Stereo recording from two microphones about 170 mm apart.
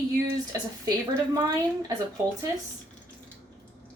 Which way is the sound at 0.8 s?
20° right (ahead or behind).